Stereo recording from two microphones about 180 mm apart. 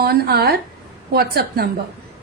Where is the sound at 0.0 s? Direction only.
60° right (ahead or behind).